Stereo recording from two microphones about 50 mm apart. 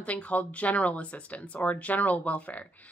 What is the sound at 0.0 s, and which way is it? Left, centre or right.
Speech, left.